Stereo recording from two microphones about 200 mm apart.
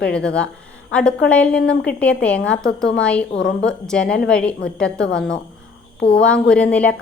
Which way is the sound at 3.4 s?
65° left (ahead or behind).